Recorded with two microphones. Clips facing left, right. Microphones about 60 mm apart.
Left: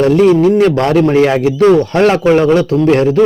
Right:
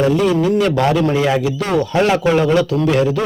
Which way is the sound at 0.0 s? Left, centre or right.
Left.